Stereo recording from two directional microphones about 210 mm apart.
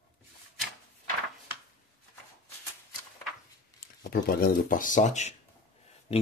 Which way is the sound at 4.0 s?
45° left (ahead or behind).